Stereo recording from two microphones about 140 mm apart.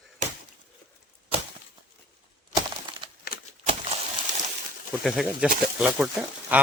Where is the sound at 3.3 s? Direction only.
90° left.